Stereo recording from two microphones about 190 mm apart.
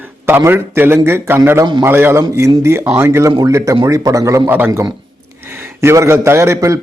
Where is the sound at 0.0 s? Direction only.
10° right (ahead or behind).